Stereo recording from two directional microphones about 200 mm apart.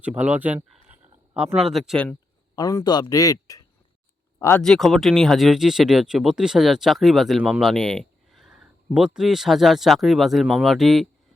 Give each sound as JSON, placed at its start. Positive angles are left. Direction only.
{"t": 0.0, "sound": "a sound", "side_deg": -5}
{"t": 1.9, "sound": "speech", "side_deg": 5}
{"t": 2.6, "sound": "a man's voice", "side_deg": 15}
{"t": 4.6, "sound": "speech", "side_deg": 0}